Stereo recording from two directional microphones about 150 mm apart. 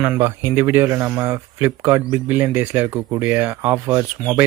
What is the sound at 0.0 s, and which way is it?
Speech, 15° right (ahead or behind).